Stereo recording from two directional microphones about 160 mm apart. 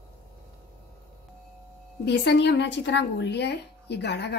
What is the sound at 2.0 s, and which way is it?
A woman's voice, 90° left.